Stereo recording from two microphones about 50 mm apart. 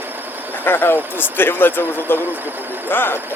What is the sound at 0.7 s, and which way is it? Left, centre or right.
Speech, left.